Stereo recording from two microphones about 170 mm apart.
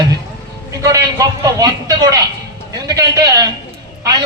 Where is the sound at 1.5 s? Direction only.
20° right (ahead or behind).